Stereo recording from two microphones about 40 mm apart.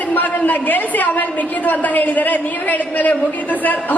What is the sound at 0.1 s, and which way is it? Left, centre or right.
A woman's voice, left.